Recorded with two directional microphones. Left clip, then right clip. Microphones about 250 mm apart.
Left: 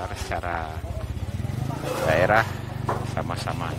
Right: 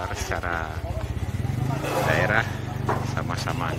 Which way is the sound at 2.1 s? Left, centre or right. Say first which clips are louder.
Left 5 dB; centre.